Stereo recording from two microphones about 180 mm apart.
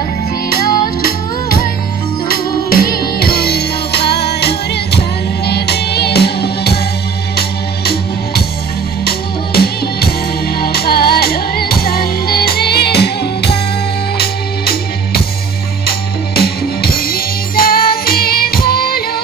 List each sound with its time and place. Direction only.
0.5 s music: 55° left (ahead or behind)